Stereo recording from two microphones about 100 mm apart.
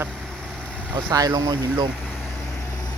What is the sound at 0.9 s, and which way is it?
Speech, 40° right (ahead or behind).